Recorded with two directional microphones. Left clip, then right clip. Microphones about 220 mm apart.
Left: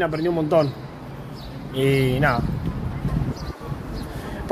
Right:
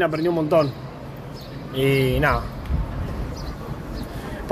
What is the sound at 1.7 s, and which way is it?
Speech, 5° left (ahead or behind).